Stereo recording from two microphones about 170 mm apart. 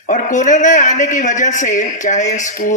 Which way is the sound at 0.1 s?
50° left (ahead or behind).